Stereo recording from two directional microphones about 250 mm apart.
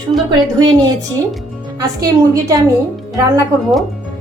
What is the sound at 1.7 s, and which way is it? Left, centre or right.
Speech, centre.